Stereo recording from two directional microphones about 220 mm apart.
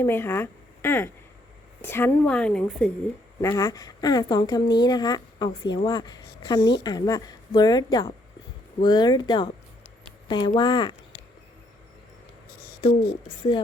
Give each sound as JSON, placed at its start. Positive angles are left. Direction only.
{"t": 0.0, "sound": "a woman's voice", "side_deg": 10}
{"t": 3.4, "sound": "speech", "side_deg": 15}
{"t": 12.8, "sound": "speech", "side_deg": 20}